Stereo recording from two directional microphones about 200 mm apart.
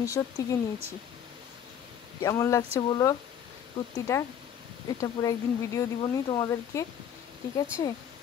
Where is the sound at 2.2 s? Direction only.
15° left (ahead or behind).